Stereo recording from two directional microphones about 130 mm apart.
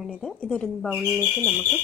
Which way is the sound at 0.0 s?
5° left (ahead or behind).